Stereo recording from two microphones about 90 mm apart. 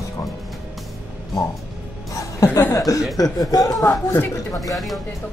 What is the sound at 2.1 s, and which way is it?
Speech, 35° left (ahead or behind).